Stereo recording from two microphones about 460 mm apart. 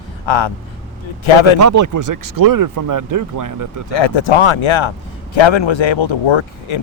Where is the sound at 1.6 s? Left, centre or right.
Right.